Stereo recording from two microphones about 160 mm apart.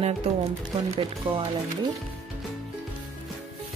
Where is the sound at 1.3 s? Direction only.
30° right (ahead or behind).